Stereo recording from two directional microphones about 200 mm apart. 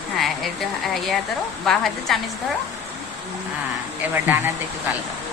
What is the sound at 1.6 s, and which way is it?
Speech, centre (ahead or behind).